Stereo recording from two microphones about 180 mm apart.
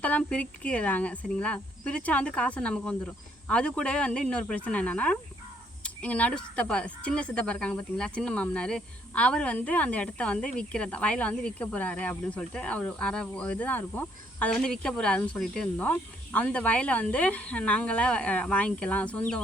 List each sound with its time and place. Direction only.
0.0 s speech: 5° left (ahead or behind)